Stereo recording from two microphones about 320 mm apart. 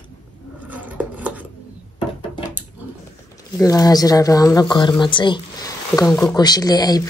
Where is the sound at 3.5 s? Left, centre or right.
Centre.